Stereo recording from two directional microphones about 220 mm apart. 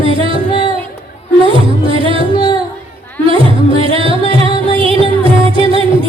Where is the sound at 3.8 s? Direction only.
25° right (ahead or behind).